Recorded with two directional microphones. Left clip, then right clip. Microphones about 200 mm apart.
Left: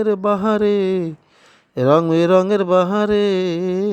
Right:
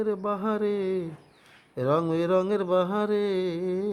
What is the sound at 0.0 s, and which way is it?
Speech, 35° left (ahead or behind).